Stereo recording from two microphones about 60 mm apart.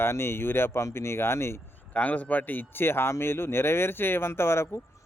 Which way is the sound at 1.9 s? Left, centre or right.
Left.